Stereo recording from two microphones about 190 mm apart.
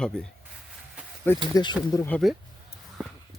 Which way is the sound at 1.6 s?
20° left (ahead or behind).